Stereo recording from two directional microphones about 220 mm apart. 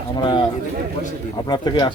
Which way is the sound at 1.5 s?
20° left (ahead or behind).